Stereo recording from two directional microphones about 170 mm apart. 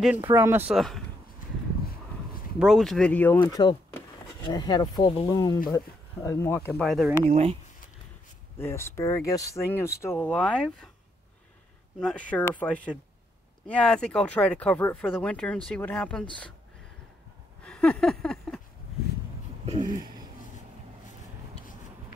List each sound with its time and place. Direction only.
0.0 s speech: 10° right (ahead or behind)
0.7 s speech: centre (ahead or behind)
2.6 s speech: centre (ahead or behind)
3.4 s speech: 25° left (ahead or behind)
5.3 s speech: 20° left (ahead or behind)
6.8 s speech: centre (ahead or behind)
7.2 s speech: 40° right (ahead or behind)
8.5 s speech: 15° left (ahead or behind)
12.0 s speech: 5° left (ahead or behind)
17.6 s a sound: 5° left (ahead or behind)